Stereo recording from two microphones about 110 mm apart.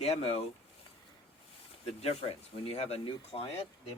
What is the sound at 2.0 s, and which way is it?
Speech, 65° left (ahead or behind).